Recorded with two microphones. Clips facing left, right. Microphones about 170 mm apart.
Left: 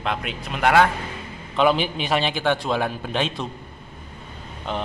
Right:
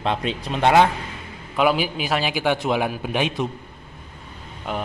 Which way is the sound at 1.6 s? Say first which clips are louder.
Even; 5° right (ahead or behind).